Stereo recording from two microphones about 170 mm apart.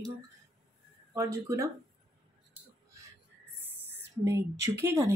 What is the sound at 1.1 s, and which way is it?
Speech, 20° right (ahead or behind).